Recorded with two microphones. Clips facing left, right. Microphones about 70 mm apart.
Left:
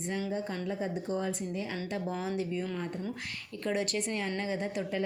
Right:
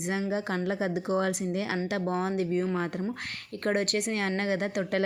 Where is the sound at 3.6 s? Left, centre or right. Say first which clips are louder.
Right 4 dB; right.